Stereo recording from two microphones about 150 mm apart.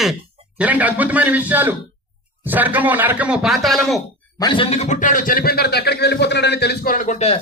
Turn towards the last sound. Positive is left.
turn(degrees=45)  # may be behind; listen again after turning